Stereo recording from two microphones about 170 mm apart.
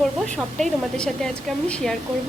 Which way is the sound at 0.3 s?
5° left (ahead or behind).